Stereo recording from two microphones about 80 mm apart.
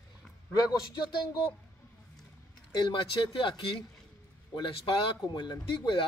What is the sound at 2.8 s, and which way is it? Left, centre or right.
Speech, left.